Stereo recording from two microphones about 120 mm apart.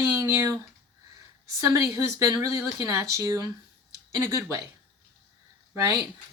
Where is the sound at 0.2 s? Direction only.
25° right (ahead or behind).